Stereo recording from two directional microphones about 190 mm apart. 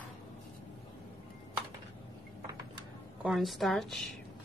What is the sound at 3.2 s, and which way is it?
Speech, centre (ahead or behind).